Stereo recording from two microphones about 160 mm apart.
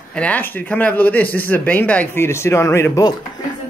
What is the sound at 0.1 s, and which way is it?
A woman's voice, 10° left (ahead or behind).